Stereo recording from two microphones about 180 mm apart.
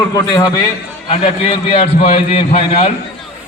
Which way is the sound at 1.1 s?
30° left (ahead or behind).